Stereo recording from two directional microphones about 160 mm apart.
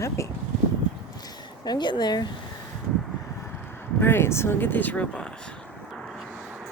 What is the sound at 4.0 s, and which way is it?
Speech, 15° left (ahead or behind).